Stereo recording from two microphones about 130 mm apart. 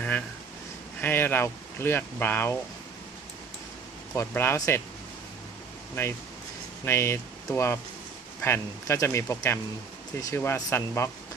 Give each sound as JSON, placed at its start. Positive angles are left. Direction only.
{"t": 1.0, "sound": "speech", "side_deg": 15}
{"t": 4.1, "sound": "speech", "side_deg": 20}
{"t": 5.9, "sound": "speech", "side_deg": 20}